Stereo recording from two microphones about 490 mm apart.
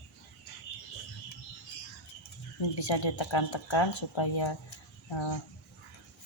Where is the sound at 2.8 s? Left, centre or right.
Left.